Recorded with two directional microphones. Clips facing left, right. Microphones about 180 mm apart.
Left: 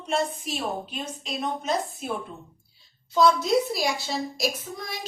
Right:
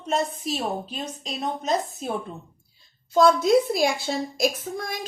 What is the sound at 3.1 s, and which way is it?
A woman's voice, 50° right (ahead or behind).